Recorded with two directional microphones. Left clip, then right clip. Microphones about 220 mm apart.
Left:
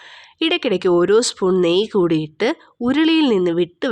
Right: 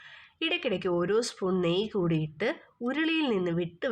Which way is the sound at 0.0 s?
35° left (ahead or behind).